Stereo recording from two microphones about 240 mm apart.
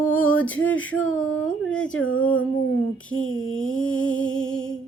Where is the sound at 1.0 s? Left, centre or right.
Left.